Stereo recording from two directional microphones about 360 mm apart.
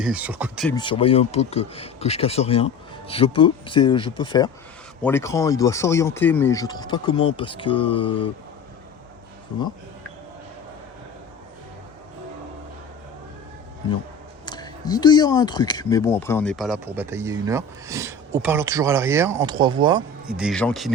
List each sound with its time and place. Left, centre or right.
0.0 s speech: centre
0.8 s speech: centre
14.4 s speech: centre